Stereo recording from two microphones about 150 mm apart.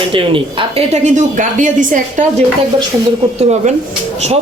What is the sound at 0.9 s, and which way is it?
A woman's voice, 55° right (ahead or behind).